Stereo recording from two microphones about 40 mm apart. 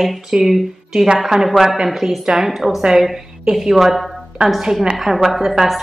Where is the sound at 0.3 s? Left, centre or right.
Centre.